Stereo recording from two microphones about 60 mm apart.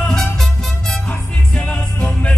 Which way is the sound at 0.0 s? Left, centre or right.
Centre.